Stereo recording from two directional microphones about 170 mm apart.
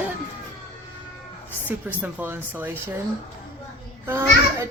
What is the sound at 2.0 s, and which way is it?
Speech, 10° right (ahead or behind).